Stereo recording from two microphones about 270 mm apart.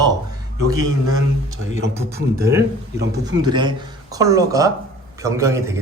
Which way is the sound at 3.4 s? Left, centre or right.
Centre.